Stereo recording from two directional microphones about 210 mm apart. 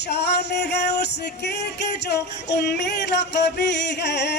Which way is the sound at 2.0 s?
50° left (ahead or behind).